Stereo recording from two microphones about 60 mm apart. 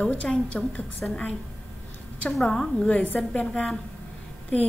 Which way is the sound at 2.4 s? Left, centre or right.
Centre.